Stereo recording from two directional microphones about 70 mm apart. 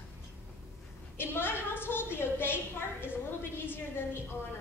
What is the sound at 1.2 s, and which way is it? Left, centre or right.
A woman's voice, left.